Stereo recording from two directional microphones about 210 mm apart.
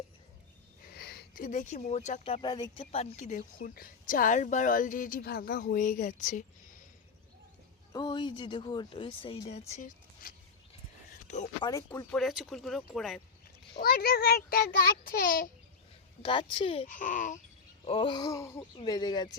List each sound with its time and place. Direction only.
0.9 s speech: 50° left (ahead or behind)
7.9 s speech: 20° left (ahead or behind); by 10.3 s 35° left (ahead or behind)
11.9 s speech: 5° left (ahead or behind)
13.7 s a child's voice: 45° left (ahead or behind)
16.2 s speech: 25° left (ahead or behind)
16.8 s speech: 40° left (ahead or behind)
17.8 s speech: 25° left (ahead or behind)